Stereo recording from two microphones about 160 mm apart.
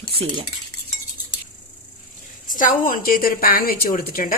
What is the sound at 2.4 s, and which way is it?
A woman's voice, 55° left (ahead or behind).